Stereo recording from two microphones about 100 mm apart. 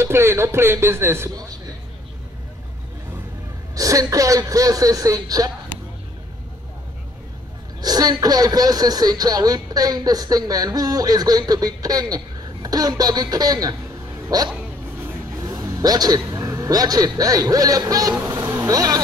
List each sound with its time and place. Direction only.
0.0 s a man's voice: 25° right (ahead or behind)
3.7 s speech: 35° right (ahead or behind)
7.8 s a man's voice: 40° right (ahead or behind)